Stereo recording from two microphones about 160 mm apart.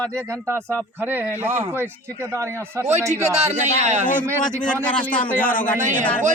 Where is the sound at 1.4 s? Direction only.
45° right (ahead or behind).